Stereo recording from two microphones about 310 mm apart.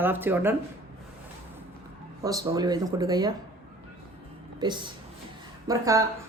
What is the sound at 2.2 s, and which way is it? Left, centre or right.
Speech, centre.